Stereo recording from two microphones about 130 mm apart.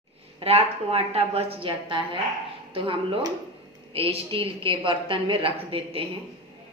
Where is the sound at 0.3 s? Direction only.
50° right (ahead or behind).